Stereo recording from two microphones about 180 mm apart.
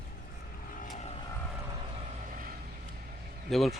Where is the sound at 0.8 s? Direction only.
40° left (ahead or behind).